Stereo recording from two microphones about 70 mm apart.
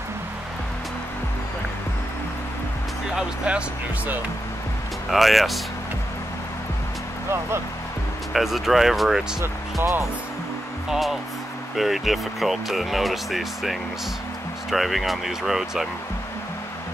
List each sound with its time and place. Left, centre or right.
3.2 s speech: centre
5.1 s speech: centre
8.3 s speech: centre
9.4 s speech: right
10.9 s speech: centre